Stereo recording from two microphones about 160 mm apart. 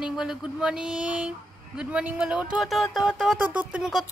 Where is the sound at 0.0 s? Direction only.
5° right (ahead or behind).